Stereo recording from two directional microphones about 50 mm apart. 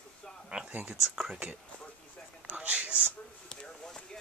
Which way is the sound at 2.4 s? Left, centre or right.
Right.